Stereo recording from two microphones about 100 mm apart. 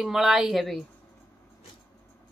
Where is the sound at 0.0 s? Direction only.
5° right (ahead or behind).